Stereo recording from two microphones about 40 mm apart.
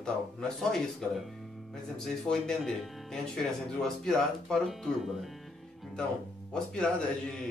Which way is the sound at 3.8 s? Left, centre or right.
Centre.